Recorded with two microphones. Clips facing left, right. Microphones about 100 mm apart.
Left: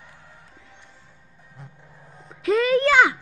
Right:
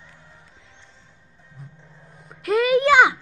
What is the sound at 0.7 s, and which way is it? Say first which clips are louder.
Music: left 2 dB; 15° left (ahead or behind).